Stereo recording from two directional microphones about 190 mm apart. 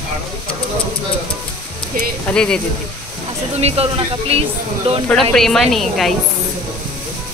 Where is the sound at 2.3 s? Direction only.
5° left (ahead or behind).